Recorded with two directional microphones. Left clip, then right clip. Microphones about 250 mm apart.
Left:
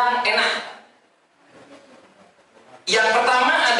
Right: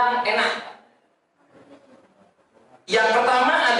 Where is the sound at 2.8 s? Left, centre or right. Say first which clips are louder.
Left 1 dB; centre.